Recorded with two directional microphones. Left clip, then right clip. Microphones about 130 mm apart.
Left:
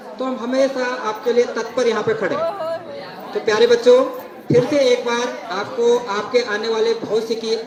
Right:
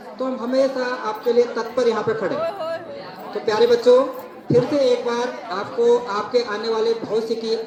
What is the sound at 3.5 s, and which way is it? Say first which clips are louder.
Speech: left 2 dB; 25° left (ahead or behind).